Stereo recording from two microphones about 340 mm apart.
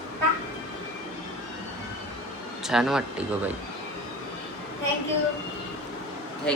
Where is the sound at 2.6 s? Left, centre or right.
Centre.